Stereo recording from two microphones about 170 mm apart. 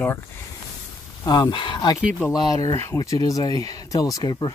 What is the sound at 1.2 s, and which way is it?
Speech, 25° left (ahead or behind).